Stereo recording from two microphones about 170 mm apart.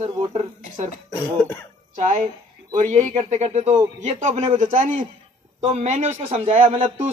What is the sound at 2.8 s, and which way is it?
A man's voice, 45° right (ahead or behind).